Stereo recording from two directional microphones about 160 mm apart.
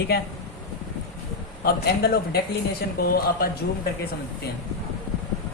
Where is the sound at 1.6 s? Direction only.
80° left.